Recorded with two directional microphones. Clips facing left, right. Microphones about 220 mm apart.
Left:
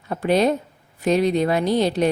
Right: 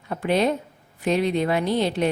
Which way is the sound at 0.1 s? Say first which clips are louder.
Left 3 dB; 40° left (ahead or behind).